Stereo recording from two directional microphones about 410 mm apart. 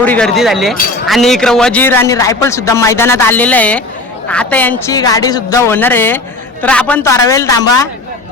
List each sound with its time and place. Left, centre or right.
0.0 s speech: centre